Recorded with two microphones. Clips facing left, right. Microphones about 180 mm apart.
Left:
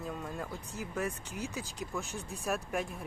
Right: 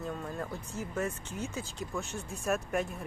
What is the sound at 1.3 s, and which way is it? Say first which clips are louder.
Speech: right 1 dB; 15° left (ahead or behind).